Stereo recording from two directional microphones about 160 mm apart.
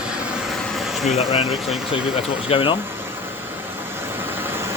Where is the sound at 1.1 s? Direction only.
40° left (ahead or behind).